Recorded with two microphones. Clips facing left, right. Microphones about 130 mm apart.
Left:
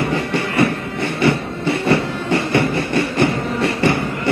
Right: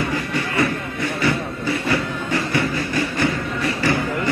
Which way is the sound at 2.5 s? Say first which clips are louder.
Left 4 dB; 65° left (ahead or behind).